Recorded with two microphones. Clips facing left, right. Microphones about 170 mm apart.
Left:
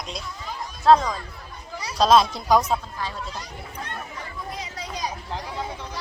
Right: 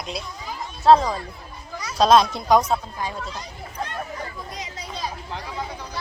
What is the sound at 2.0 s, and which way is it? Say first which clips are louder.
Speech: right 1 dB; centre (ahead or behind).